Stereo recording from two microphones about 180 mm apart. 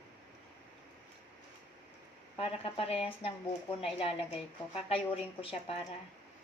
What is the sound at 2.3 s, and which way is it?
Speech, 30° left (ahead or behind).